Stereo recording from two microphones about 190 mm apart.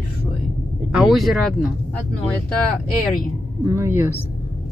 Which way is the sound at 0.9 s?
5° right (ahead or behind).